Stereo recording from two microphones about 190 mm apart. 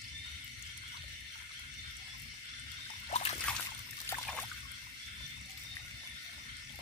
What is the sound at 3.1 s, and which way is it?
Trickle, 35° left (ahead or behind).